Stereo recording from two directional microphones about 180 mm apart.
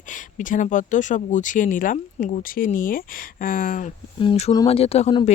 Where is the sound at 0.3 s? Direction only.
45° left (ahead or behind).